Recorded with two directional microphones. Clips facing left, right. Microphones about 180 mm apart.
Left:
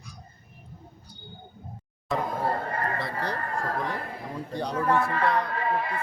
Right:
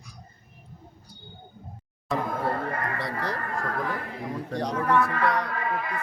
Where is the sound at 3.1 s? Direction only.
30° left (ahead or behind).